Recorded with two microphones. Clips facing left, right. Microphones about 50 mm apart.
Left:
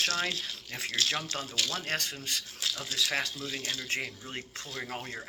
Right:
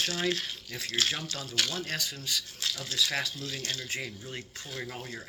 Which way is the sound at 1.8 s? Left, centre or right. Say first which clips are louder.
Left 1 dB; left.